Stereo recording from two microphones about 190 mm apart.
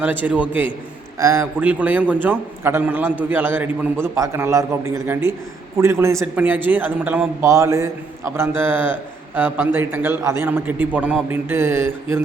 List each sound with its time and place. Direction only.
0.0 s a man's voice: 10° right (ahead or behind)